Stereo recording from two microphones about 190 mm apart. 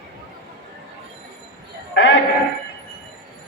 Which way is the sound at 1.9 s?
65° left (ahead or behind).